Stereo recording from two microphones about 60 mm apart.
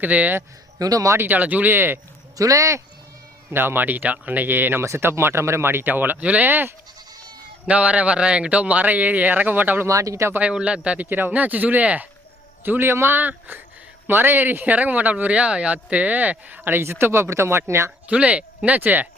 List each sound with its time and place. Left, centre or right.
0.0 s speech: right
0.8 s speech: right
1.2 s speech: right
2.4 s speech: right
3.5 s speech: right
7.7 s speech: right
9.8 s speech: right
10.5 s speech: centre
11.0 s speech: right
12.6 s speech: right
18.1 s speech: right